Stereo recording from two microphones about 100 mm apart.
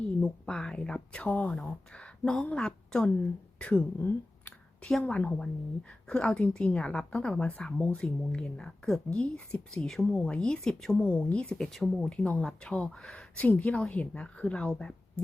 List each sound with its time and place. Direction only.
0.2 s a woman's voice: 5° left (ahead or behind)